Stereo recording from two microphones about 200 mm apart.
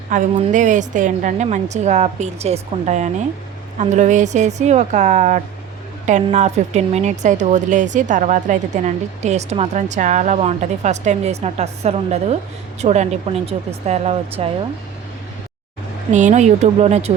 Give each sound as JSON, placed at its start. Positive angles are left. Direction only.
{"t": 0.1, "sound": "a woman's voice", "side_deg": -40}
{"t": 16.1, "sound": "a woman's voice", "side_deg": -35}